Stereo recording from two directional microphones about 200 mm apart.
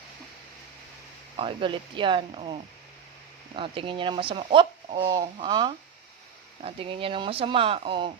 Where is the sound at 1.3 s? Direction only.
25° right (ahead or behind).